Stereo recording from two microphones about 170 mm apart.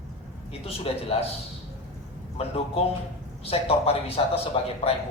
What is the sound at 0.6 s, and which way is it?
Speech, 35° left (ahead or behind).